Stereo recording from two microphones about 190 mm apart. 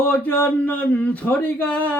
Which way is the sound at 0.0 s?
10° left (ahead or behind).